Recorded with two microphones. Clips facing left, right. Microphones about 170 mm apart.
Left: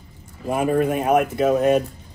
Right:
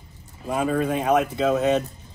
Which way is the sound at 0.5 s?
10° left (ahead or behind).